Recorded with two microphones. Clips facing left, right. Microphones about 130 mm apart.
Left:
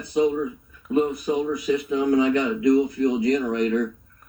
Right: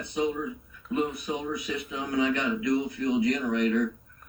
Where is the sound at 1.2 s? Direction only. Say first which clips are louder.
Left 9 dB; 40° left (ahead or behind).